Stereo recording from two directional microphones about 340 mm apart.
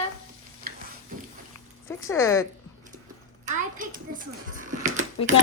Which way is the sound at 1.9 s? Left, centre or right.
Centre.